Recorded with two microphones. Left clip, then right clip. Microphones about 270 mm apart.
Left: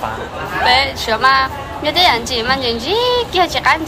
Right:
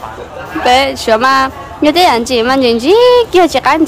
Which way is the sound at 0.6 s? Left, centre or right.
Right.